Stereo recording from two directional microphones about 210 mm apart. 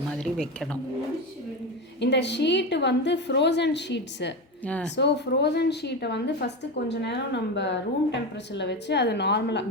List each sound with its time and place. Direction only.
0.1 s speech: 5° left (ahead or behind)
2.0 s a woman's voice: 55° left (ahead or behind)
4.6 s speech: 5° left (ahead or behind)
4.9 s speech: 55° left (ahead or behind)